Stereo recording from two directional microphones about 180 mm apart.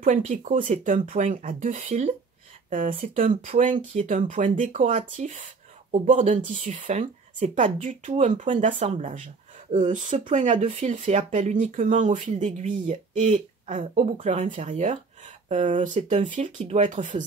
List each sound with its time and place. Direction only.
0.0 s speech: 45° right (ahead or behind)